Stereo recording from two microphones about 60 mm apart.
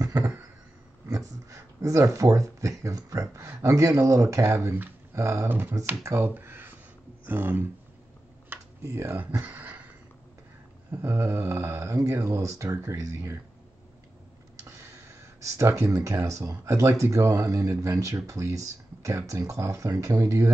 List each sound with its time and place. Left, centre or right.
0.0 s a sound: right
1.0 s a sound: right
3.3 s speech: right
5.1 s mantra: right
5.5 s speech: right
8.5 s computer keyboard: right
8.8 s mantra: right
9.4 s a sound: right
11.0 s mantra: right
11.9 s speech: right
14.7 s a sound: right
15.8 s speech: right